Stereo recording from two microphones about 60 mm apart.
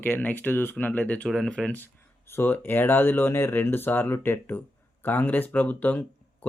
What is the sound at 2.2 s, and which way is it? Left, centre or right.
Speech, left.